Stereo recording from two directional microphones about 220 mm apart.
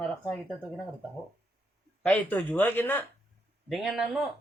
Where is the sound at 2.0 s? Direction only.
5° left (ahead or behind).